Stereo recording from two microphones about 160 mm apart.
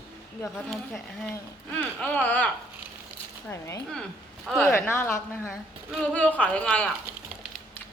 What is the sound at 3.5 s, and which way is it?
Speech, 20° left (ahead or behind).